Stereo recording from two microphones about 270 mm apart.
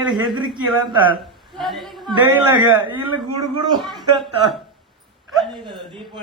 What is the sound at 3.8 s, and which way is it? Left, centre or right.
A man's voice, centre.